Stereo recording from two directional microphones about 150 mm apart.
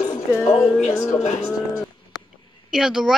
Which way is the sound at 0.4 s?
20° left (ahead or behind).